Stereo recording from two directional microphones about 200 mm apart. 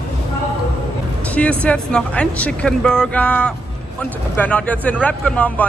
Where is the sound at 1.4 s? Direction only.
5° left (ahead or behind).